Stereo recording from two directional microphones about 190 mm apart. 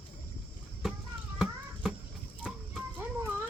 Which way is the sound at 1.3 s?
5° right (ahead or behind).